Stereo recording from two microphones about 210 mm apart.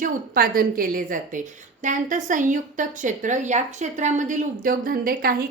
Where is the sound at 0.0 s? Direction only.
45° right (ahead or behind).